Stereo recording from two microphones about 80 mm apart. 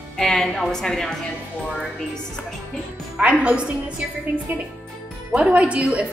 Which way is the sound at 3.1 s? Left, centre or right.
Centre.